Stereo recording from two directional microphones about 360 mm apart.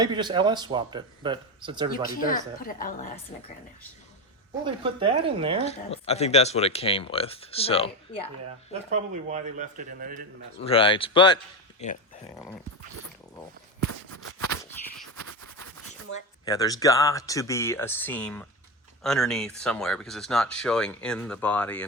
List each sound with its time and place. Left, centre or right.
0.0 s speech: centre
1.9 s speech: left
4.6 s speech: centre
5.6 s speech: centre
8.9 s speech: centre
10.6 s speech: centre
14.6 s a sound: centre
16.5 s speech: centre